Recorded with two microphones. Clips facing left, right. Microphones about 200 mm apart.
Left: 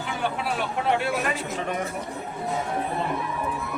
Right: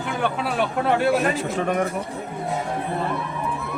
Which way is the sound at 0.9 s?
40° right (ahead or behind).